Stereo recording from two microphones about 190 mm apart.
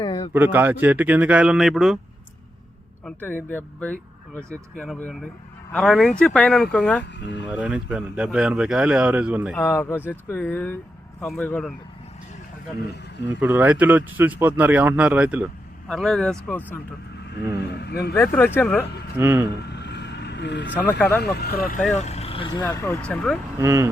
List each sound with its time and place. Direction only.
0.0 s a sound: 30° left (ahead or behind)
0.3 s speech: 10° right (ahead or behind)
3.0 s speech: 10° left (ahead or behind)
7.5 s speech: 5° right (ahead or behind)
9.6 s speech: 10° left (ahead or behind)
13.2 s speech: 10° right (ahead or behind); by 16.8 s 10° left (ahead or behind)
17.7 s speech: 60° left (ahead or behind)
18.1 s speech: 10° left (ahead or behind)
19.2 s speech: 10° right (ahead or behind)
19.6 s vehicle: 65° left (ahead or behind)
21.2 s speech: 60° left (ahead or behind)
21.9 s speech: 35° left (ahead or behind)
22.6 s speech: 15° left (ahead or behind)
23.6 s speech: 15° right (ahead or behind)